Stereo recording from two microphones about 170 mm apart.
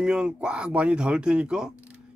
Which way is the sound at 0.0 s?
5° right (ahead or behind).